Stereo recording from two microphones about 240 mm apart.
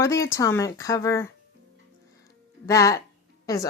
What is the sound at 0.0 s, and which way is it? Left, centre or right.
Speech, centre.